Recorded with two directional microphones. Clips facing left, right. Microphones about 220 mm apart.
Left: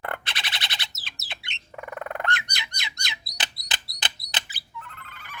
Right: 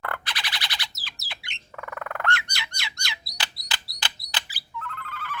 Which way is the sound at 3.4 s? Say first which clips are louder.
Even; 20° left (ahead or behind).